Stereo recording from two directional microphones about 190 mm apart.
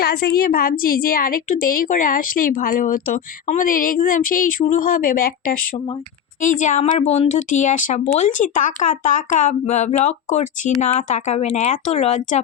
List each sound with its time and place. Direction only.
0.0 s a woman's voice: 55° left (ahead or behind); by 12.4 s 35° left (ahead or behind)